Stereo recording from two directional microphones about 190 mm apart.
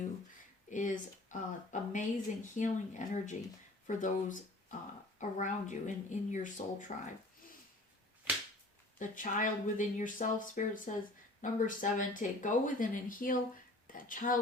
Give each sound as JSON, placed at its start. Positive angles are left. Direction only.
{"t": 0.7, "sound": "speech", "side_deg": 40}
{"t": 5.4, "sound": "speech", "side_deg": 40}
{"t": 9.0, "sound": "speech", "side_deg": 45}